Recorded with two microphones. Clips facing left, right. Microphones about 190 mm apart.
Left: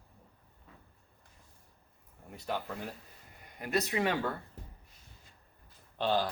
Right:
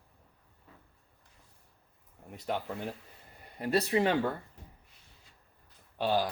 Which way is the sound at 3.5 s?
30° right (ahead or behind).